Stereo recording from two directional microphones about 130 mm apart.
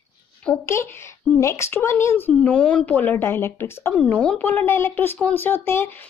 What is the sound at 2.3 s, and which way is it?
Speech, 10° left (ahead or behind).